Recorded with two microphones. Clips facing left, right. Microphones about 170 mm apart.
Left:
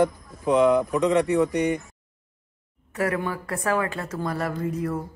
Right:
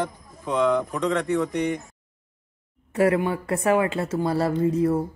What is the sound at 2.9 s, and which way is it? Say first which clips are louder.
A woman's voice: right 5 dB; 25° right (ahead or behind).